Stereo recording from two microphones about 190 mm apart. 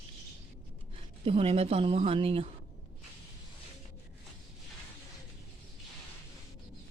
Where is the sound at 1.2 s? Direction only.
30° right (ahead or behind).